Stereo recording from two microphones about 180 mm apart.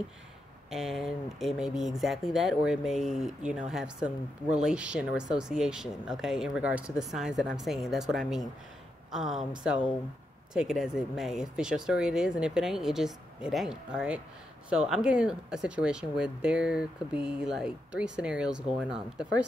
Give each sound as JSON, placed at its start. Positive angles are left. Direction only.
{"t": 0.7, "sound": "speech", "side_deg": 0}